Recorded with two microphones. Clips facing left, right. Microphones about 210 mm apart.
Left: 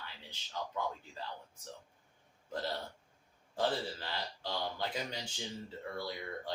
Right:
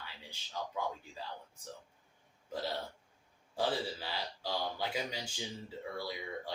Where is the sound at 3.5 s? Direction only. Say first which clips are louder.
Even; 10° right (ahead or behind).